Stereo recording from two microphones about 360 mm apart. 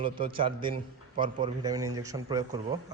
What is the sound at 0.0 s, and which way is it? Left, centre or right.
A man's voice, centre.